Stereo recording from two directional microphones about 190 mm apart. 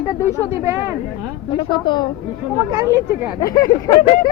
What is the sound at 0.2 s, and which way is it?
Speech, 15° right (ahead or behind).